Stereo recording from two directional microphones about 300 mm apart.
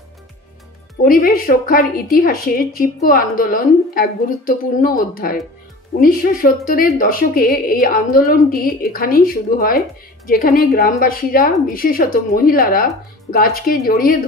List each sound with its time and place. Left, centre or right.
1.0 s a woman's voice: left